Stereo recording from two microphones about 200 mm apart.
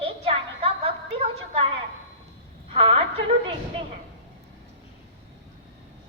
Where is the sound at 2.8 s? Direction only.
30° right (ahead or behind).